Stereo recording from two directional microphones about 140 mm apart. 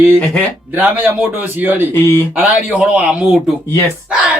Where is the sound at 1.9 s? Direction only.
15° left (ahead or behind).